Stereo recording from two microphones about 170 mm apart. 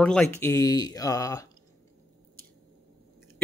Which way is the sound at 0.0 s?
5° left (ahead or behind).